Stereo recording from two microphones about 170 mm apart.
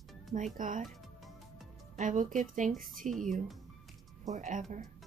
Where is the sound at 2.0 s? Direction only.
50° right (ahead or behind).